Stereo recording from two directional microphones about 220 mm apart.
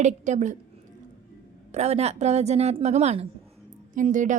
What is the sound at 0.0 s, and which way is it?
Speech, 30° right (ahead or behind).